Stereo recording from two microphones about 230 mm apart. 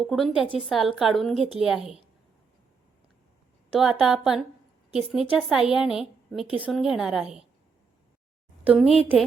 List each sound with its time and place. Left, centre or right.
0.0 s a woman's voice: centre
3.8 s a woman's voice: centre
8.6 s a woman's voice: centre